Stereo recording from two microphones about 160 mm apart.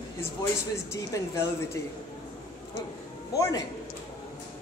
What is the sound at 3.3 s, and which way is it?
Speech, 20° left (ahead or behind).